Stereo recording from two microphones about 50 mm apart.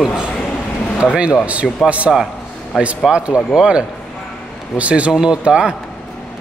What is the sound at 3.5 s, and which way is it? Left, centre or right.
A man's voice, right.